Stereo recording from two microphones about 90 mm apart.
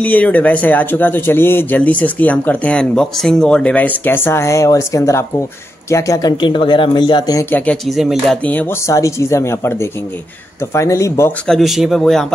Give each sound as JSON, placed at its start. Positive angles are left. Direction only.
{"t": 0.0, "sound": "speech", "side_deg": 15}
{"t": 6.4, "sound": "speech", "side_deg": 65}
{"t": 7.7, "sound": "speech", "side_deg": 0}
{"t": 8.5, "sound": "speech", "side_deg": 20}
{"t": 8.8, "sound": "speech", "side_deg": 35}
{"t": 11.4, "sound": "speech", "side_deg": 0}